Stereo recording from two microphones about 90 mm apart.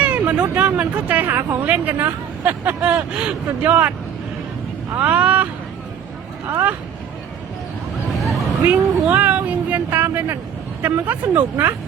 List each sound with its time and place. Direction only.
0.0 s a sound: 15° right (ahead or behind)
0.4 s speech: 15° right (ahead or behind)
4.9 s speech: 15° right (ahead or behind)
6.5 s speech: 20° right (ahead or behind)
8.6 s speech: 15° right (ahead or behind)